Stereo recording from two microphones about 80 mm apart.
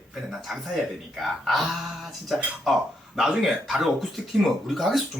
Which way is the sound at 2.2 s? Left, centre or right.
Centre.